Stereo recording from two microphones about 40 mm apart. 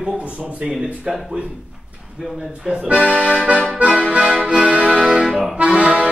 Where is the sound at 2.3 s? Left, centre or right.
Centre.